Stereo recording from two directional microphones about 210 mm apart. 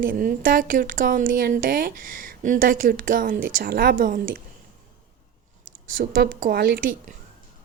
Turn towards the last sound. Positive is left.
turn(degrees=-45)  # may be behind; listen again after turning